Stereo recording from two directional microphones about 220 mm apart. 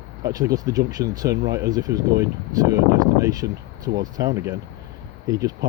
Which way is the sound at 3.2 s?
15° right (ahead or behind).